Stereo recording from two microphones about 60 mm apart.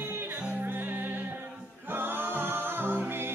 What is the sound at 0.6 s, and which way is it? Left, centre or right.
Music, right.